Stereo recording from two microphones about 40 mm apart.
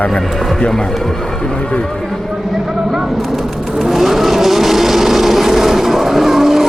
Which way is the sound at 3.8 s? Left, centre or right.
Centre.